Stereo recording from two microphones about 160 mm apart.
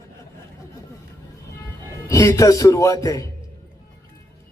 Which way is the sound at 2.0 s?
20° left (ahead or behind).